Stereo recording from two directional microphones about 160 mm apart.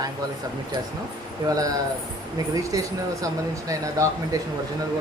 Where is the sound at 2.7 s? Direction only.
20° right (ahead or behind).